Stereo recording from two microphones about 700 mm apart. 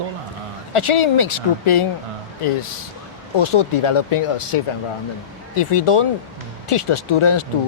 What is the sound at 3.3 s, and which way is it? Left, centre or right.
Speech, left.